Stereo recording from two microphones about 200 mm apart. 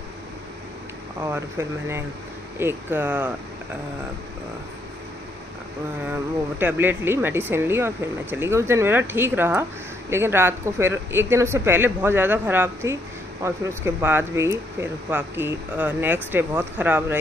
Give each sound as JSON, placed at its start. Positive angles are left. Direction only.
{"t": 1.2, "sound": "speech", "side_deg": -15}
{"t": 6.6, "sound": "speech", "side_deg": -10}